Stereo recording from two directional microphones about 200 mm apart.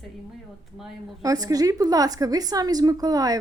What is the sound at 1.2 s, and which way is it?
A woman's voice, 15° right (ahead or behind).